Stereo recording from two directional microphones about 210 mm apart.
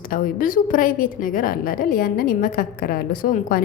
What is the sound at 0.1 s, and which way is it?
A woman's voice, 40° left (ahead or behind).